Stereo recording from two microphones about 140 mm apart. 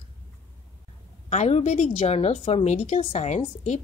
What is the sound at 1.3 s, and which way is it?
A woman's voice, 55° left (ahead or behind).